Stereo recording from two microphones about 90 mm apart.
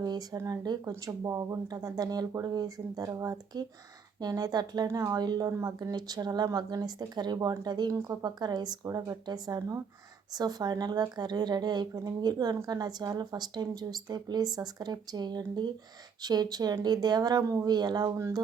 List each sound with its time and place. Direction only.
0.0 s speech: 50° right (ahead or behind)
5.5 s speech: 35° right (ahead or behind)
5.9 s speech: 50° right (ahead or behind)